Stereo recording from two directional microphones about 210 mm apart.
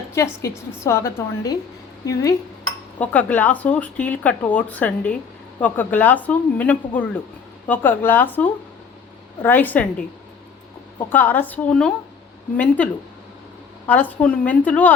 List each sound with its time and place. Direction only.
0.1 s speech: 15° left (ahead or behind)
3.0 s speech: 5° left (ahead or behind)
11.1 s speech: 10° left (ahead or behind)